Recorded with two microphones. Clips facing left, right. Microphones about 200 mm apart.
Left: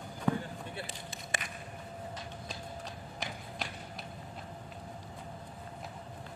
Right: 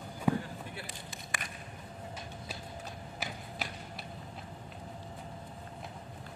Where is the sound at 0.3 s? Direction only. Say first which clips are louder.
Right 1 dB; 10° right (ahead or behind).